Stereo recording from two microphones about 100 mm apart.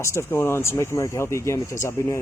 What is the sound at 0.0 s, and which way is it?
Speech, 25° left (ahead or behind).